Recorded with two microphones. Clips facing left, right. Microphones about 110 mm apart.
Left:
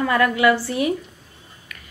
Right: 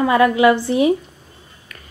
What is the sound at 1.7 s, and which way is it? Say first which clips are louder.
Music: right 1 dB; 35° right (ahead or behind).